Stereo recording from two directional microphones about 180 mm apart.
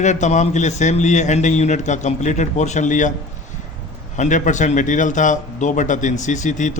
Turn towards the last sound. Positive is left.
turn(degrees=45)  # may be behind; listen again after turning